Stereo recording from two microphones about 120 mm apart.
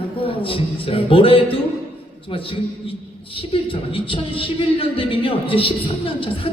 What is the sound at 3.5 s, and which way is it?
A man's voice, 50° left (ahead or behind).